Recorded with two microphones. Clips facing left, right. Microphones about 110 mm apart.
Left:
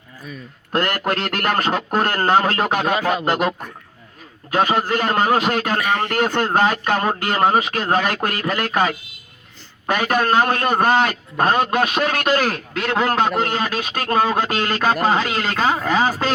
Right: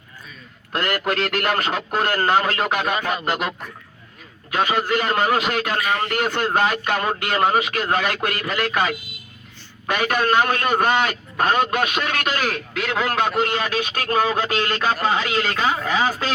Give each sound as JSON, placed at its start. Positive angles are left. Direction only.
{"t": 0.7, "sound": "a man's voice", "side_deg": 40}
{"t": 4.5, "sound": "a man's voice", "side_deg": 40}